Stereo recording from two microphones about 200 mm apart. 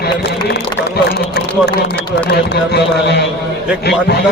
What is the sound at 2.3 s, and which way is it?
A man's voice, 55° left (ahead or behind).